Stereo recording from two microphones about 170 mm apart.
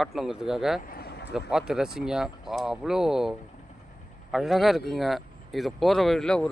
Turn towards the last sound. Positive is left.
turn(degrees=5)  # may be behind; listen again after turning